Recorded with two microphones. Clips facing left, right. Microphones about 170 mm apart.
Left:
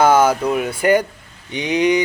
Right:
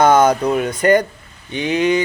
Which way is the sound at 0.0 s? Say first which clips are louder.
Right 1 dB; 5° left (ahead or behind).